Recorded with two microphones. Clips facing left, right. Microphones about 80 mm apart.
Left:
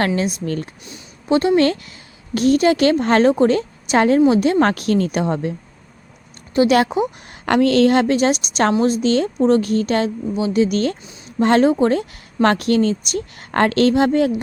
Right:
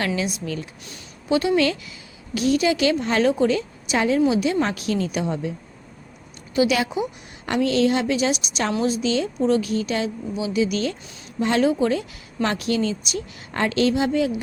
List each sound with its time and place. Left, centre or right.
0.2 s speech: left
1.3 s speech: left
7.4 s a woman's voice: left